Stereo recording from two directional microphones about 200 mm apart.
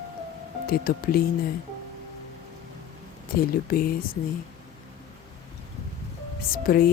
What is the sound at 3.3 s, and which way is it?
Speech, 45° left (ahead or behind).